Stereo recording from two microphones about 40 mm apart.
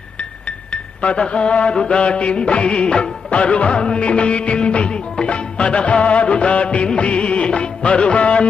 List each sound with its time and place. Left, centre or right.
0.2 s music: left
1.7 s mantra: centre
2.0 s music of bollywood: left